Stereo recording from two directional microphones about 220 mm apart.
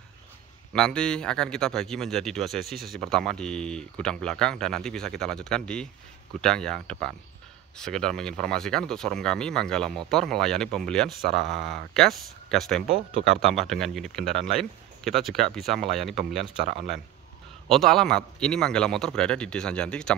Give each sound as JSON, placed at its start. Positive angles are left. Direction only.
{"t": 0.7, "sound": "speech", "side_deg": 5}
{"t": 16.6, "sound": "speech", "side_deg": -30}
{"t": 17.6, "sound": "speech", "side_deg": 0}